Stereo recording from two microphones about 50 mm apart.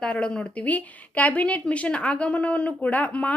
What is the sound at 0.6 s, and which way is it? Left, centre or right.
Speech, left.